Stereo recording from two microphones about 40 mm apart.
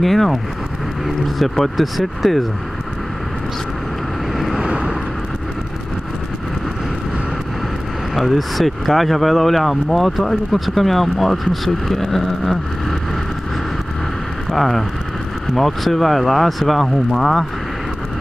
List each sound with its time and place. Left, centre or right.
0.0 s speech: centre
1.4 s speech: centre
4.3 s vehicle: centre
4.6 s vehicle: right
8.1 s speech: centre
14.5 s speech: centre